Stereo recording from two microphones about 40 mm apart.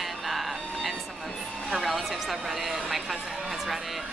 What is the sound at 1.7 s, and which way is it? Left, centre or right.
A woman's voice, centre.